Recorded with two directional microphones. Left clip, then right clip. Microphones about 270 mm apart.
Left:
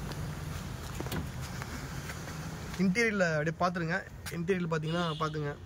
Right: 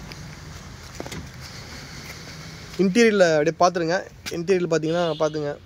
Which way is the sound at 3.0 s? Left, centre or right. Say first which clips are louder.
Right 12 dB; right.